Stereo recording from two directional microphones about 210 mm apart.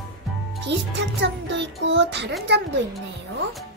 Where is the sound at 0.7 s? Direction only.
55° right (ahead or behind).